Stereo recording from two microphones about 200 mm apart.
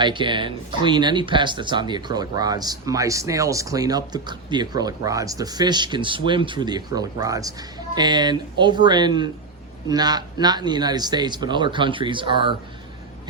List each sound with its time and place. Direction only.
0.0 s speech: 25° right (ahead or behind)